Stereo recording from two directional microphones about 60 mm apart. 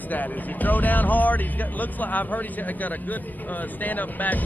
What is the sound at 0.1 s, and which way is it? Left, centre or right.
Speech, left.